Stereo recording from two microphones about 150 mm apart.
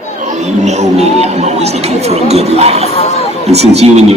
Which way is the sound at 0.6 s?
50° right (ahead or behind).